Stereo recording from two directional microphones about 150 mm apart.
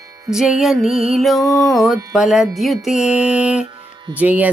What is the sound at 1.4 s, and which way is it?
Music, 25° left (ahead or behind).